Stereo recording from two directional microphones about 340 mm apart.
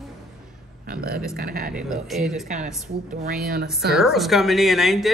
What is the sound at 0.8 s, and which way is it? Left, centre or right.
Speech, right.